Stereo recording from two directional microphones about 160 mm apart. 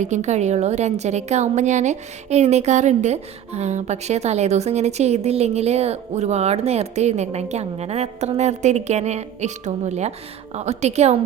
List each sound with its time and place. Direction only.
0.0 s a woman's voice: 50° right (ahead or behind)